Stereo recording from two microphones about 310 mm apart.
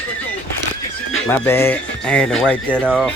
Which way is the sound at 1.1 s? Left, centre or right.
Centre.